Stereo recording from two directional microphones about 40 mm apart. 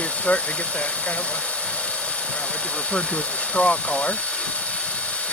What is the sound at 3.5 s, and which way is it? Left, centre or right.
Speech, left.